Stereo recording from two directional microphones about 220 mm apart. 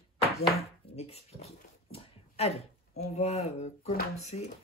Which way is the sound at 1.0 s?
30° left (ahead or behind).